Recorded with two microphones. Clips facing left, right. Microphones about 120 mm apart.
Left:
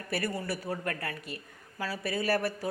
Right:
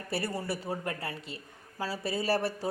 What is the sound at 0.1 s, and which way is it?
A woman's voice, 30° right (ahead or behind).